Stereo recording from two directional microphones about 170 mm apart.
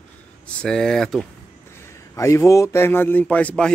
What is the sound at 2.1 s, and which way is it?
Speech, 20° left (ahead or behind).